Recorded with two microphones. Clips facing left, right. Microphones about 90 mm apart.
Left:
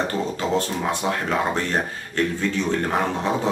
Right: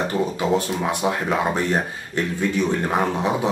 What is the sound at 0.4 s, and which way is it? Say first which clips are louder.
Speech: right 1 dB; 15° right (ahead or behind).